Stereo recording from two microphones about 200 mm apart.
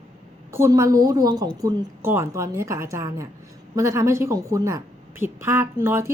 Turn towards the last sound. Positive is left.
turn(degrees=-10)  # may be behind; listen again after turning